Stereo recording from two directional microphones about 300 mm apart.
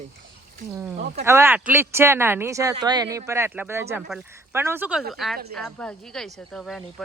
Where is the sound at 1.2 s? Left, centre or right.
Centre.